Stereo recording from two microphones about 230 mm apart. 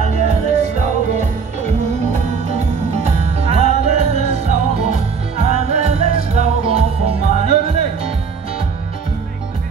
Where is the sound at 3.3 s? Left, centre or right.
Right.